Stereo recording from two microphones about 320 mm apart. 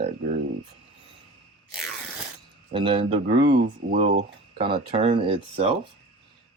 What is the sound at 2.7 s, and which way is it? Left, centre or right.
Speech, centre.